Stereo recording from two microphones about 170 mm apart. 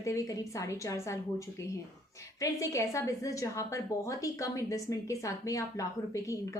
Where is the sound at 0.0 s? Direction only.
20° left (ahead or behind).